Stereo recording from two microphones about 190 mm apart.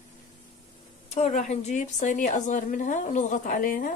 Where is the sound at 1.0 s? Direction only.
35° left (ahead or behind).